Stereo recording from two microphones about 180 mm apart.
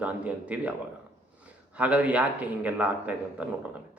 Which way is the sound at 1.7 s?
5° right (ahead or behind).